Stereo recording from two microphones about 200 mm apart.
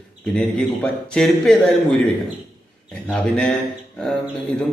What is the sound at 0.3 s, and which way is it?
A man's voice, 5° left (ahead or behind).